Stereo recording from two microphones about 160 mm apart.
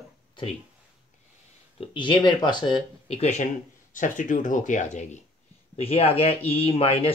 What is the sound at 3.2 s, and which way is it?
Speech, 45° left (ahead or behind).